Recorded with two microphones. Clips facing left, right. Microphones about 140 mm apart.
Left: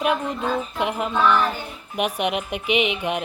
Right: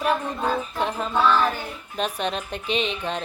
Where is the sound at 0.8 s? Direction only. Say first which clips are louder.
Left 1 dB; 15° left (ahead or behind).